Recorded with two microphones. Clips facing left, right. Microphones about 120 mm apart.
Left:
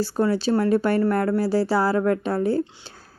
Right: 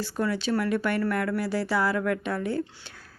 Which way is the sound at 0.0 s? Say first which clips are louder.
Left 6 dB; 35° left (ahead or behind).